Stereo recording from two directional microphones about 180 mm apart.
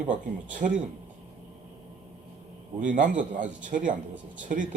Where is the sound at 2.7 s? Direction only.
45° right (ahead or behind).